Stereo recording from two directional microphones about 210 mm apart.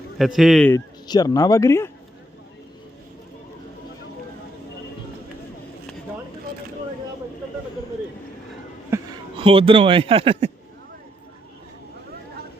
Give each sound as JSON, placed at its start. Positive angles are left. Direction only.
{"t": 0.2, "sound": "a man's voice", "side_deg": 0}
{"t": 0.7, "sound": "speech", "side_deg": 20}
{"t": 8.9, "sound": "a sound", "side_deg": -15}
{"t": 9.4, "sound": "speech", "side_deg": -25}